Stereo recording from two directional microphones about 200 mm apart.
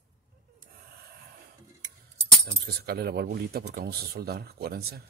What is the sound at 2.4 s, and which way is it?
Speech, 50° right (ahead or behind).